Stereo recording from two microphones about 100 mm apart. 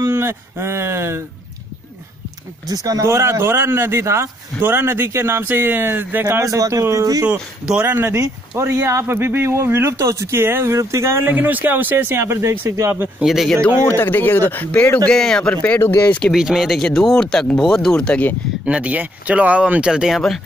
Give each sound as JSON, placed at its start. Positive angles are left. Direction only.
{"t": 0.0, "sound": "speech", "side_deg": -25}
{"t": 2.7, "sound": "speech", "side_deg": -35}
{"t": 7.2, "sound": "speech", "side_deg": -10}
{"t": 7.8, "sound": "speech", "side_deg": -25}
{"t": 13.2, "sound": "speech", "side_deg": 0}
{"t": 13.8, "sound": "speech", "side_deg": 20}
{"t": 15.0, "sound": "speech", "side_deg": 5}
{"t": 15.5, "sound": "speech", "side_deg": 15}
{"t": 16.3, "sound": "speech", "side_deg": -5}
{"t": 18.7, "sound": "speech", "side_deg": -15}